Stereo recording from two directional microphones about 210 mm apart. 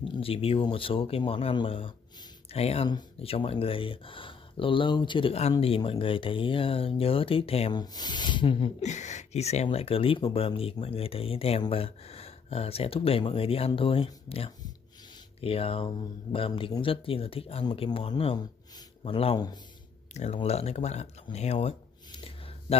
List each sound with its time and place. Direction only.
0.2 s speech: 25° left (ahead or behind)
20.2 s speech: 30° left (ahead or behind)